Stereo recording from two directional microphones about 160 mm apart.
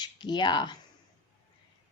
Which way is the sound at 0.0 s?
25° left (ahead or behind).